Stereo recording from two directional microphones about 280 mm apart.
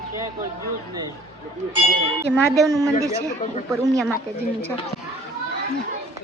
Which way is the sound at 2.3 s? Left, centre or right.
Centre.